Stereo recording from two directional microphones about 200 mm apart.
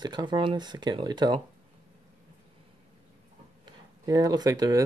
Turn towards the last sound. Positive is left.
turn(degrees=-20)  # may be behind; listen again after turning